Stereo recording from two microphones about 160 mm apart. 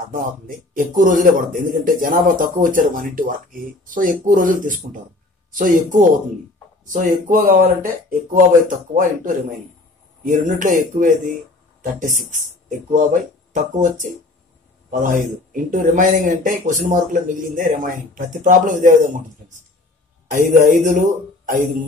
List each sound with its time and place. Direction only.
0.0 s a man's voice: 55° right (ahead or behind)
20.2 s speech: 55° right (ahead or behind)